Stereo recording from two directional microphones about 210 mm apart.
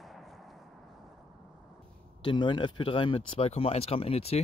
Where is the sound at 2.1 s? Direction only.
20° left (ahead or behind).